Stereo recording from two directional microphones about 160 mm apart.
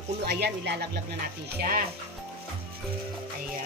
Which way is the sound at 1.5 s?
60° right (ahead or behind).